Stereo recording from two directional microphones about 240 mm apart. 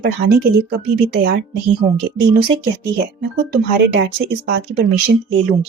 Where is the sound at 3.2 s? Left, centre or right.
Right.